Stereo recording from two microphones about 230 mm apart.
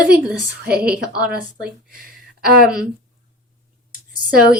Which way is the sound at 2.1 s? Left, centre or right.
Right.